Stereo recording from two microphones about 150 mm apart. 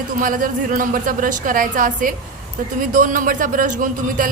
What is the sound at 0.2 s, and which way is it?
A man's voice, 65° right (ahead or behind).